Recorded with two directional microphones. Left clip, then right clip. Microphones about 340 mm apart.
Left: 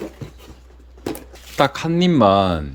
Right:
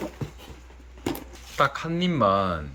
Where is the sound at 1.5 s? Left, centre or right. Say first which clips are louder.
Left 6 dB; left.